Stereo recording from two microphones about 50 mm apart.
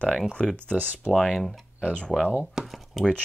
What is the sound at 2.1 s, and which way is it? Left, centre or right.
Speech, right.